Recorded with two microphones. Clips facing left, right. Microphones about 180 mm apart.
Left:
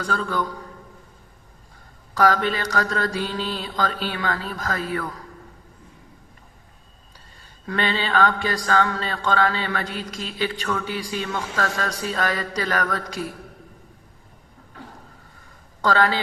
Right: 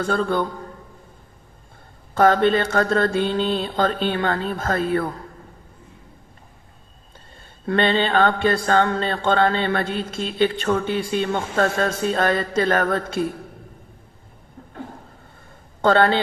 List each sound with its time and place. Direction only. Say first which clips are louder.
0.0 s a man's voice: right 4 dB; 35° right (ahead or behind)
2.1 s a man's voice: right 4 dB; 30° right (ahead or behind)
7.6 s a man's voice: right 6 dB; 40° right (ahead or behind)